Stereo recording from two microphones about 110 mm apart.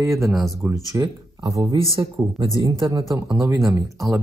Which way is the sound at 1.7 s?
55° right (ahead or behind).